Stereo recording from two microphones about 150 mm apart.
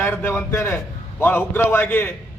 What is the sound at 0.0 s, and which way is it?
A man's voice, 15° left (ahead or behind).